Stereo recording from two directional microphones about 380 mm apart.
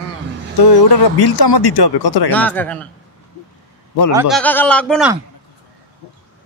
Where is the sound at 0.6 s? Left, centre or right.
Left.